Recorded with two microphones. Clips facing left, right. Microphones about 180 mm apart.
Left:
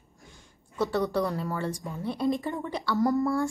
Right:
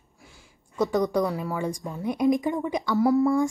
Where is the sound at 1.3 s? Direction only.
10° right (ahead or behind).